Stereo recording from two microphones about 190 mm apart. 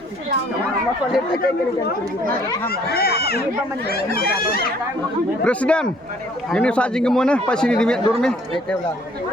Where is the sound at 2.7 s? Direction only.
55° left (ahead or behind).